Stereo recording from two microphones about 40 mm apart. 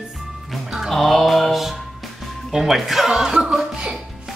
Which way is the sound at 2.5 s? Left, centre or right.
Centre.